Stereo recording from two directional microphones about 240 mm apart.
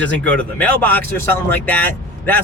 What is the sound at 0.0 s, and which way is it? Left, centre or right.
Speech, centre.